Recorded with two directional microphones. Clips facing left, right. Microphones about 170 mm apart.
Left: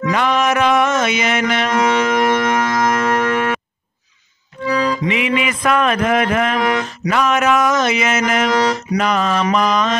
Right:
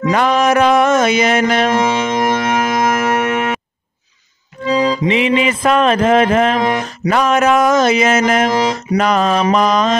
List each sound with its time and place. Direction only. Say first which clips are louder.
0.1 s music: right 4 dB; 40° right (ahead or behind)
1.7 s music: right 1 dB; 25° right (ahead or behind)
4.6 s music: right 3 dB; 20° right (ahead or behind)
7.1 s speech: right 3 dB; 35° right (ahead or behind)
8.5 s music: right 1 dB; 20° right (ahead or behind)
8.9 s speech: right 6 dB; 35° right (ahead or behind)